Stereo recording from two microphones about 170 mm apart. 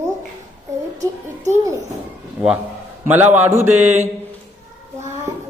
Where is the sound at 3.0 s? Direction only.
15° right (ahead or behind).